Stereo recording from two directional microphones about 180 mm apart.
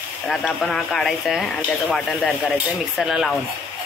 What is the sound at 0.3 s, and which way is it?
Speech, centre (ahead or behind).